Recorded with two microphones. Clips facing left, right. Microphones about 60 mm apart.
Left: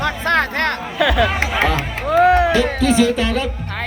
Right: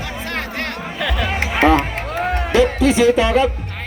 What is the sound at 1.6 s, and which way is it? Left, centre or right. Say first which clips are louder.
Music: right 7 dB; right.